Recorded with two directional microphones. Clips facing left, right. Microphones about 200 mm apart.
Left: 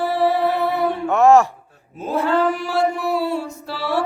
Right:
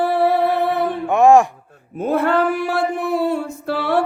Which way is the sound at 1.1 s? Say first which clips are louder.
Right 1 dB; 15° right (ahead or behind).